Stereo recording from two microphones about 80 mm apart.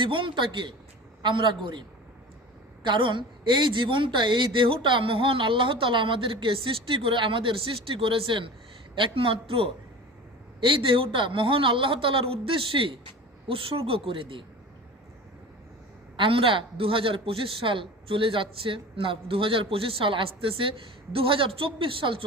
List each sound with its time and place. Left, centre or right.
0.0 s a man's voice: right
2.8 s a woman's voice: right
14.1 s a woman's voice: right
16.1 s a woman's voice: right